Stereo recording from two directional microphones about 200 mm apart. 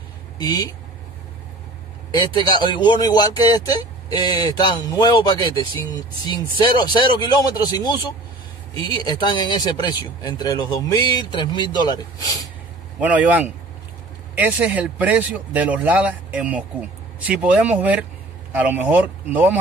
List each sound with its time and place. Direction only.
0.4 s speech: 20° left (ahead or behind)
2.0 s speech: 20° left (ahead or behind)
8.9 s speech: 20° left (ahead or behind)
13.0 s speech: 5° right (ahead or behind)